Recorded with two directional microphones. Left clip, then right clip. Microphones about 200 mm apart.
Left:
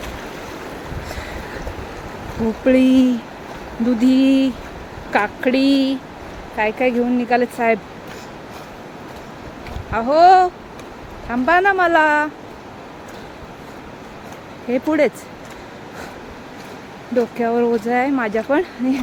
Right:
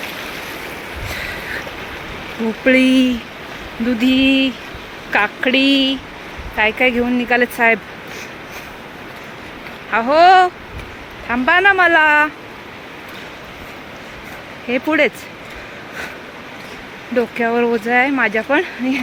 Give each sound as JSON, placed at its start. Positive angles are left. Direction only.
{"t": 2.6, "sound": "speech", "side_deg": 10}
{"t": 6.6, "sound": "speech", "side_deg": 0}
{"t": 9.9, "sound": "speech", "side_deg": 0}
{"t": 14.7, "sound": "speech", "side_deg": 10}
{"t": 17.2, "sound": "speech", "side_deg": 0}